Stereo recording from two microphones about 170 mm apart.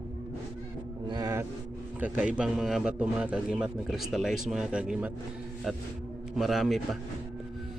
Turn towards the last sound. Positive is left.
turn(degrees=0)  # may be behind; listen again after turning